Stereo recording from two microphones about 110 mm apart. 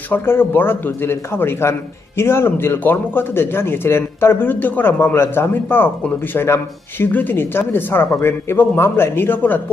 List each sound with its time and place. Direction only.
0.1 s a man's voice: 20° left (ahead or behind)